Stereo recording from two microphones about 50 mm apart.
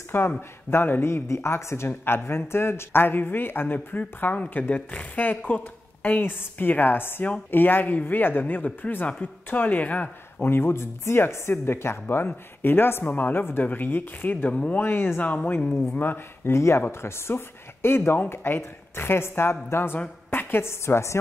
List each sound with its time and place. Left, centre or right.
0.1 s speech: left
1.0 s speech: left
1.9 s speech: left
10.4 s speech: left
14.5 s speech: left
14.8 s speech: left
15.1 s speech: left
15.9 s speech: left
16.5 s speech: left
20.2 s a sound: left
20.8 s a woman's voice: left